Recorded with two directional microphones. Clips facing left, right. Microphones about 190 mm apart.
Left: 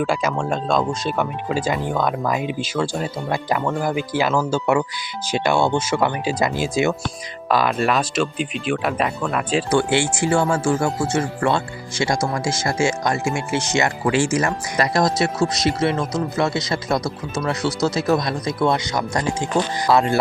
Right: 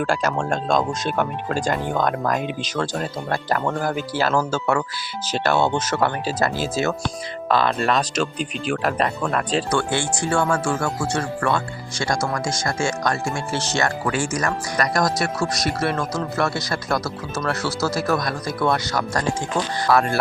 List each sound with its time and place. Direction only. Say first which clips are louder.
0.0 s speech: left 1 dB; 5° left (ahead or behind)
10.2 s speech: left 1 dB; 20° left (ahead or behind)